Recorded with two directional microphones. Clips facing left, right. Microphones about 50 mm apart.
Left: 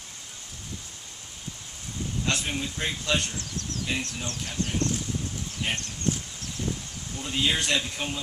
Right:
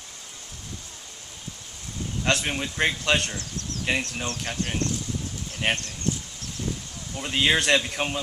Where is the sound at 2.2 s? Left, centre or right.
Right.